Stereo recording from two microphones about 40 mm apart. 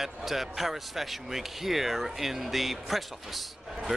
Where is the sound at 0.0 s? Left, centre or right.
Centre.